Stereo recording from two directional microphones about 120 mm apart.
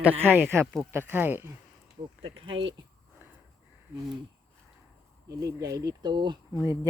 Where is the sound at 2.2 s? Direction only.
45° right (ahead or behind).